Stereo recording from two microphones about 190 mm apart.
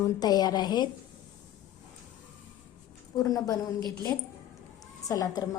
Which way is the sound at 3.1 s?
20° left (ahead or behind).